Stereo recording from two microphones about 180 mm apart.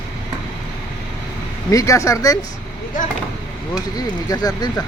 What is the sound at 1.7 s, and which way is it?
Speech, 20° left (ahead or behind).